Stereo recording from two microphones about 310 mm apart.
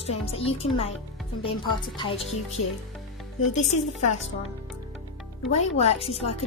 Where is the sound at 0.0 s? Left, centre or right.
Centre.